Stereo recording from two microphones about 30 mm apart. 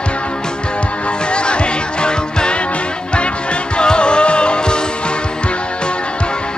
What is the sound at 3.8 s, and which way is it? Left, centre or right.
Music, left.